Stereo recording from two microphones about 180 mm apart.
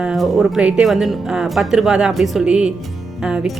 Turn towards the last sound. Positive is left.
turn(degrees=-5)  # may be behind; listen again after turning